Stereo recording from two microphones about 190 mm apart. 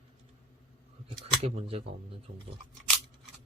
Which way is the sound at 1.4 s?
30° right (ahead or behind).